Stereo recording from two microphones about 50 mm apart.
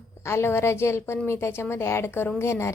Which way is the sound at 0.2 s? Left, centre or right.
Left.